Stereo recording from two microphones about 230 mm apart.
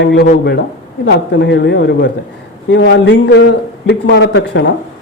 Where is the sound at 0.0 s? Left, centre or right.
Left.